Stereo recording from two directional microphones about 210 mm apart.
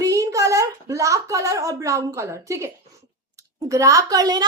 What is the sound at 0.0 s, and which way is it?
A woman's voice, 15° right (ahead or behind).